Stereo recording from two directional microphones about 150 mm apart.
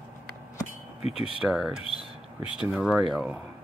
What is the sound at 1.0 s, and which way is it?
Speech, 40° left (ahead or behind).